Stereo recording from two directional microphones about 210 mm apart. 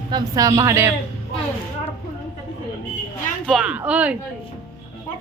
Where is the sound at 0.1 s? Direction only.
15° right (ahead or behind).